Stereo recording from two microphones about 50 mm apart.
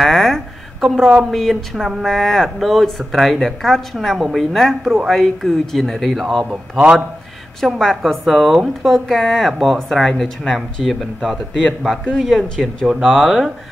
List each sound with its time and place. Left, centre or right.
0.0 s a sound: centre
1.3 s speech: centre
6.5 s a man's voice: centre
7.6 s speech: centre